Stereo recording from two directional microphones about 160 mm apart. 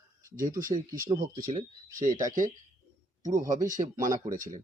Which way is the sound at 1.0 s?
25° right (ahead or behind).